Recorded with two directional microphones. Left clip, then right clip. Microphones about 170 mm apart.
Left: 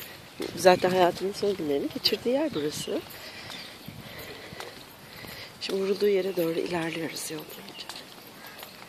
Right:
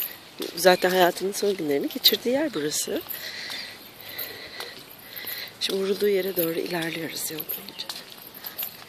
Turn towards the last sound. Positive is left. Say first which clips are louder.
# right 4 dB
turn(degrees=-5)  # may be behind; listen again after turning